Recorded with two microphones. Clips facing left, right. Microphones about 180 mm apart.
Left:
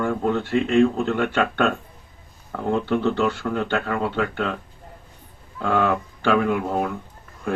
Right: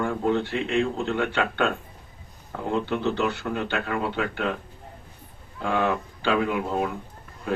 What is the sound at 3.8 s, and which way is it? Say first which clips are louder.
Speech: left 3 dB; 55° left (ahead or behind).